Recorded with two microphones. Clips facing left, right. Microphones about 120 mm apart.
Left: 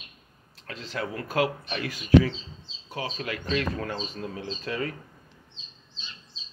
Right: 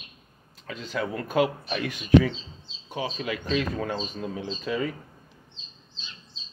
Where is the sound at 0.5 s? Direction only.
90° left.